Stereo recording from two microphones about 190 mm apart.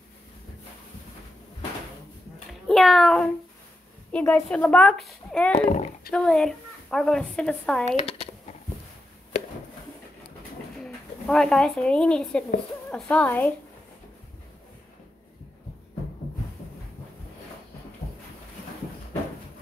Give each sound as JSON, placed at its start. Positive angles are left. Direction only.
{"t": 2.7, "sound": "speech", "side_deg": 0}
{"t": 5.5, "sound": "speech", "side_deg": 40}
{"t": 6.1, "sound": "speech", "side_deg": 5}
{"t": 7.9, "sound": "a sound", "side_deg": 35}
{"t": 10.8, "sound": "speech", "side_deg": 5}